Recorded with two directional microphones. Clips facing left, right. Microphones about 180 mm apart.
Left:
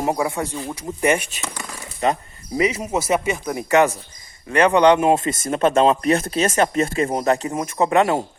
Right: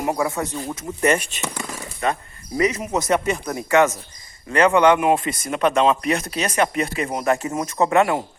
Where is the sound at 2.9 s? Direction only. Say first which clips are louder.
Even; 5° left (ahead or behind).